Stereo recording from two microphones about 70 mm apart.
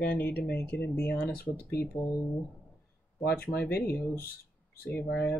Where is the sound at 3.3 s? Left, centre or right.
Left.